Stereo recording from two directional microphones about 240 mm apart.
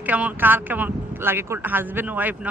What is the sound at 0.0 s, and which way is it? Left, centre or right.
Speech, centre.